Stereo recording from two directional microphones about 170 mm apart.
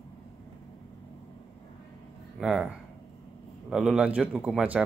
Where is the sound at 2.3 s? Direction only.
Centre (ahead or behind).